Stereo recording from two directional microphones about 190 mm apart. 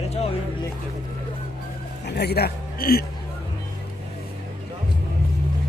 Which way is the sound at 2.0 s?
60° left (ahead or behind).